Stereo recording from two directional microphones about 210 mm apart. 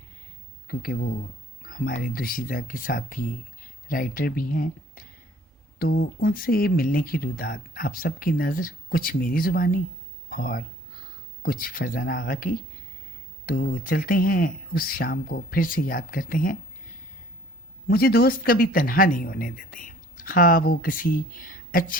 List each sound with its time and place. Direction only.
0.7 s speech: 45° left (ahead or behind)
17.8 s speech: 45° left (ahead or behind)